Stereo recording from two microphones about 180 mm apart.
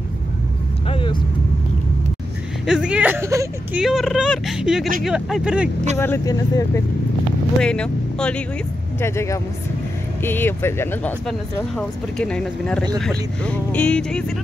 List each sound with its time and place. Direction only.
0.8 s vehicle: 30° left (ahead or behind)
2.6 s a sound: 5° right (ahead or behind)
3.8 s speech: centre (ahead or behind)
5.9 s speech: 15° left (ahead or behind)
7.6 s speech: 5° left (ahead or behind)